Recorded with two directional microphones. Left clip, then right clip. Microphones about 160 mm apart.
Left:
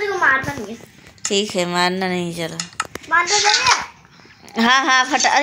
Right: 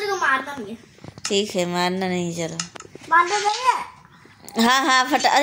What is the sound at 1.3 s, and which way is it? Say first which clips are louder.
Speech: left 3 dB; 5° right (ahead or behind).